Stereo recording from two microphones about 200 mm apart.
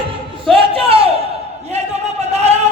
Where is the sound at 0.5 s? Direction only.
30° right (ahead or behind).